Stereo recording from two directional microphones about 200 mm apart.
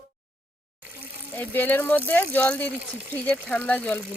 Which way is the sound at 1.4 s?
10° left (ahead or behind).